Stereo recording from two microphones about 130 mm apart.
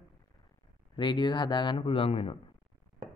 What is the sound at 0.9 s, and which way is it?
Speech, 40° left (ahead or behind).